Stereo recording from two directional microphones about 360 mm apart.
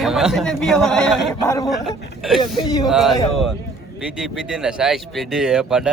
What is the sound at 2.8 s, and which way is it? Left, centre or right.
Speech, centre.